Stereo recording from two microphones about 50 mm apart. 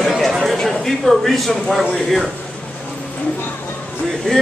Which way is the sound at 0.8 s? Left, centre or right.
Centre.